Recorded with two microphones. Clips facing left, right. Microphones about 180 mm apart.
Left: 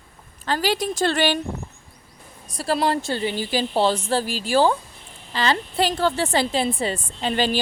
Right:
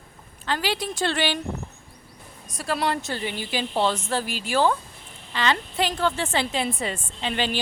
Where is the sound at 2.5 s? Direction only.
30° left (ahead or behind).